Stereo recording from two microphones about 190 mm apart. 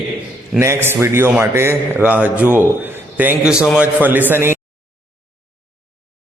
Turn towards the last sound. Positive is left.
turn(degrees=-10)  # may be behind; listen again after turning